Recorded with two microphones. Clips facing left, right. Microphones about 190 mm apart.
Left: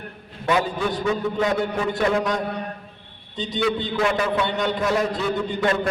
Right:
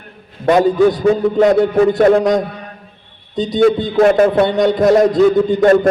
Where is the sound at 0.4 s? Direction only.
40° right (ahead or behind).